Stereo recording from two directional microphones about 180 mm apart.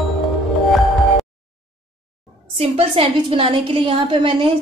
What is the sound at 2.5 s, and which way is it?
A woman's voice, 30° right (ahead or behind).